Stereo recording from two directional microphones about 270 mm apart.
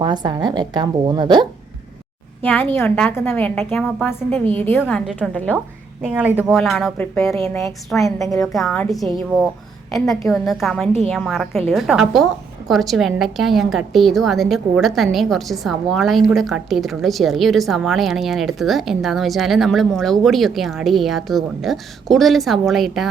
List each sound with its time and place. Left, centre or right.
0.0 s a woman's voice: centre
2.4 s a woman's voice: centre
8.0 s a woman's voice: centre
8.4 s a woman's voice: centre